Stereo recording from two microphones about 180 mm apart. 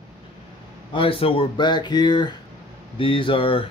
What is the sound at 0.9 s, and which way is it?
Speech, 30° left (ahead or behind).